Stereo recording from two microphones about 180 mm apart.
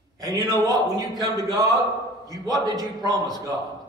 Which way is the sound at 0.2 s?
20° right (ahead or behind).